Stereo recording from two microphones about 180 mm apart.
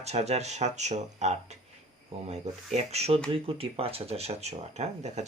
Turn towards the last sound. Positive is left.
turn(degrees=-40)  # may be behind; listen again after turning